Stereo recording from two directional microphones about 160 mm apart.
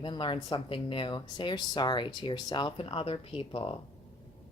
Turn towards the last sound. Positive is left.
turn(degrees=35)  # may be behind; listen again after turning